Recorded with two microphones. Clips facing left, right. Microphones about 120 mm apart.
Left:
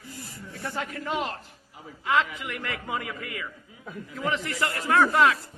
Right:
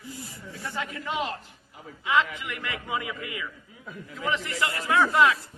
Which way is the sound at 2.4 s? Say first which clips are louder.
Left 1 dB; 40° left (ahead or behind).